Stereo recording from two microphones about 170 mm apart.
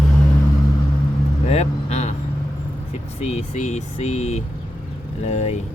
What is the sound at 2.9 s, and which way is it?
Speech, 40° left (ahead or behind).